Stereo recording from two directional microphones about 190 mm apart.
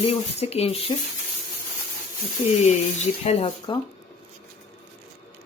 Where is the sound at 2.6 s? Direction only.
35° left (ahead or behind).